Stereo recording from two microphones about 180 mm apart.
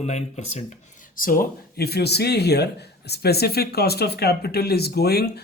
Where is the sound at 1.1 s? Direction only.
50° left (ahead or behind).